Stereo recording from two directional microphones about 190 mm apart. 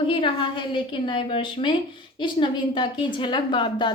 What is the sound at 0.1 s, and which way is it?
A woman's voice, 25° left (ahead or behind).